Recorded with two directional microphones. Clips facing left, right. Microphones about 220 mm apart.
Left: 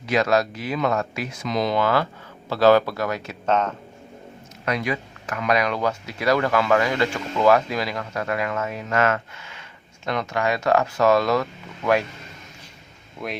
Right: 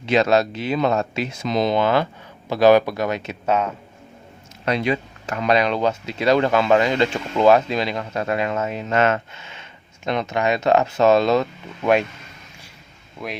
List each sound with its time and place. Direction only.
0.0 s speech: 25° right (ahead or behind)
3.4 s speech: 10° right (ahead or behind)
4.6 s speech: 25° right (ahead or behind)
13.2 s speech: centre (ahead or behind)